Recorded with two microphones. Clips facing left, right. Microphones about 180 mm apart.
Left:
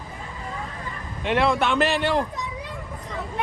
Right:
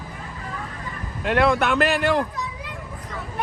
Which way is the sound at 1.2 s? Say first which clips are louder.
Right 2 dB; centre (ahead or behind).